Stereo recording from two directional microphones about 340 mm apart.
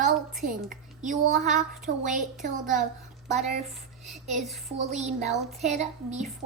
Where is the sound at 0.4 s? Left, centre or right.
Right.